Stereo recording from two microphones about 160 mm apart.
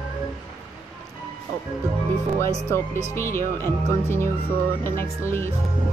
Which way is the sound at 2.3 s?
15° left (ahead or behind).